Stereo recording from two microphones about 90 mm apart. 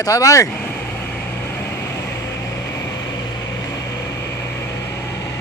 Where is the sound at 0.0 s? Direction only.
40° left (ahead or behind).